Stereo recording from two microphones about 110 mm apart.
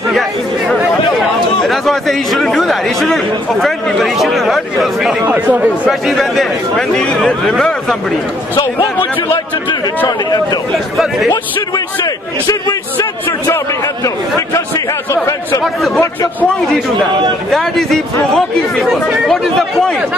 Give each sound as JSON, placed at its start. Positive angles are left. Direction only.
{"t": 1.6, "sound": "a man's voice", "side_deg": 0}
{"t": 5.2, "sound": "speech", "side_deg": -15}
{"t": 5.9, "sound": "a man's voice", "side_deg": 0}
{"t": 10.0, "sound": "speech", "side_deg": 40}
{"t": 16.0, "sound": "a man's voice", "side_deg": 20}
{"t": 17.5, "sound": "a man's voice", "side_deg": 5}